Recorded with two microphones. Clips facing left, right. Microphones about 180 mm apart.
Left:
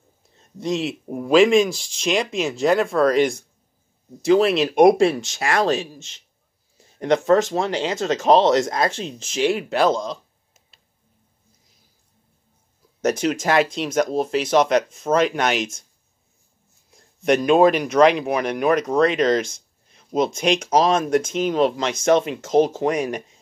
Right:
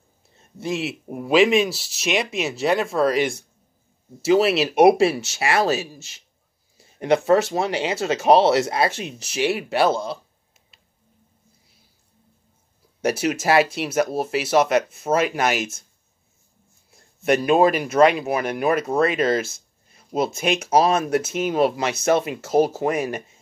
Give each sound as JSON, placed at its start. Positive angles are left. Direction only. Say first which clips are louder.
{"t": 0.6, "sound": "speech", "louder": "left 2 dB", "side_deg": -5}
{"t": 13.0, "sound": "speech", "louder": "left 1 dB", "side_deg": -10}
{"t": 17.2, "sound": "speech", "louder": "left 2 dB", "side_deg": -5}